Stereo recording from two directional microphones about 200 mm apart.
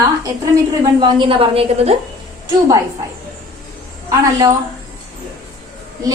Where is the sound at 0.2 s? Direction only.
20° right (ahead or behind).